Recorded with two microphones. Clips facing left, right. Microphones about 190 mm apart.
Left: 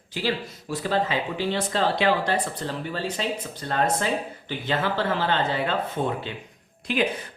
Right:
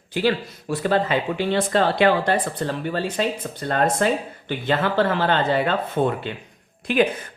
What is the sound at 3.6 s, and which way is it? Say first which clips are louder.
Speech: right 4 dB; 55° right (ahead or behind).